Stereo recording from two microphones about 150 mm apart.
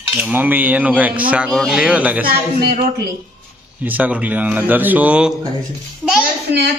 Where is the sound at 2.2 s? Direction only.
85° right.